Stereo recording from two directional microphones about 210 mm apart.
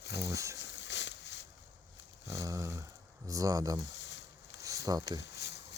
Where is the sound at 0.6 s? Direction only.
55° left (ahead or behind).